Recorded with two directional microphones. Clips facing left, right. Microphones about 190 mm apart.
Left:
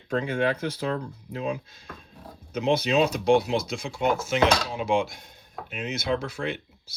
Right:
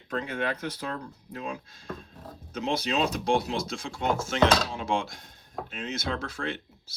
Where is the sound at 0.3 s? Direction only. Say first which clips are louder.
Left 5 dB; 30° left (ahead or behind).